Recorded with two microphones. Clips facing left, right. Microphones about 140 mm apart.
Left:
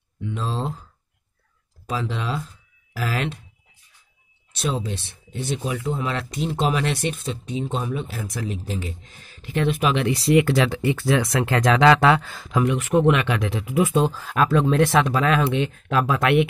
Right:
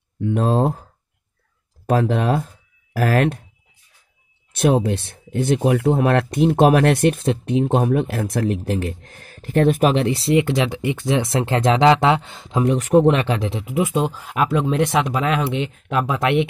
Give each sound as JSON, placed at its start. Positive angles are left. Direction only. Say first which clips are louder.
{"t": 0.2, "sound": "speech", "louder": "right 10 dB", "side_deg": -55}
{"t": 1.9, "sound": "speech", "louder": "right 9 dB", "side_deg": -55}
{"t": 4.5, "sound": "speech", "louder": "right 9 dB", "side_deg": -60}